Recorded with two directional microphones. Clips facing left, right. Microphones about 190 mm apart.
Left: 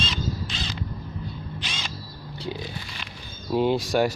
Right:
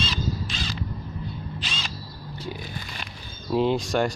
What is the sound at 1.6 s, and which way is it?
Crow, 15° left (ahead or behind).